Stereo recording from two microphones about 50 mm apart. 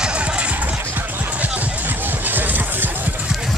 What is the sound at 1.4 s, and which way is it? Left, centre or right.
Music, right.